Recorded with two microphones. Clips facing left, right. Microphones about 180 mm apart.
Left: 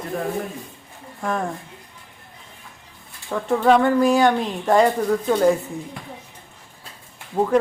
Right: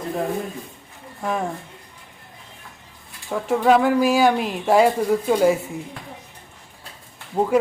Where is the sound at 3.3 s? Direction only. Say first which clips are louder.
Even; 5° right (ahead or behind).